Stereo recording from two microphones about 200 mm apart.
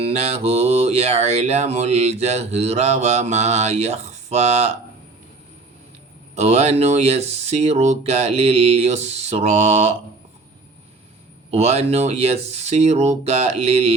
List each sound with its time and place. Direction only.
0.0 s mantra: 30° right (ahead or behind)
6.3 s mantra: 30° right (ahead or behind)
11.5 s mantra: 30° right (ahead or behind)